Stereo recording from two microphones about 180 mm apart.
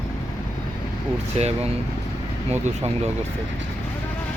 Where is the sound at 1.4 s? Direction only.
35° right (ahead or behind).